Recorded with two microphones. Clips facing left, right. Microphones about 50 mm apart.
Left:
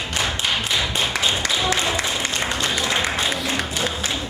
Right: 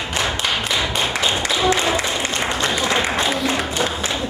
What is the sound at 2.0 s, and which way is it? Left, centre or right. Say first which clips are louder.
Applause: right 2 dB; centre.